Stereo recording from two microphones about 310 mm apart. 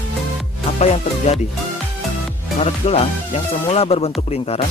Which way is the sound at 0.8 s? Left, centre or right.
Centre.